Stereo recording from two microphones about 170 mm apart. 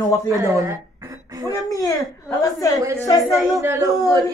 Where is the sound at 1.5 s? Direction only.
20° left (ahead or behind).